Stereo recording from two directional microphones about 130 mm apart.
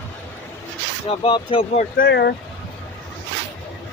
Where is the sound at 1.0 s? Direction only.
40° left (ahead or behind).